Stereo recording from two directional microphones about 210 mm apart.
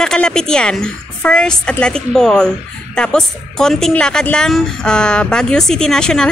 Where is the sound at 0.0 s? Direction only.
5° left (ahead or behind).